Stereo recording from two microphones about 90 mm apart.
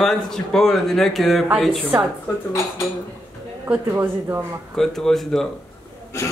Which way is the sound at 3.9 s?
25° right (ahead or behind).